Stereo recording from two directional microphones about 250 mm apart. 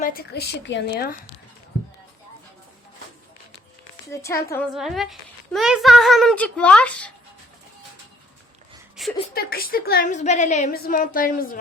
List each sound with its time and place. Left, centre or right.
0.0 s a woman's voice: left
4.1 s a woman's voice: centre
4.7 s a child's voice: centre
9.0 s a sound: centre
9.3 s a woman's voice: left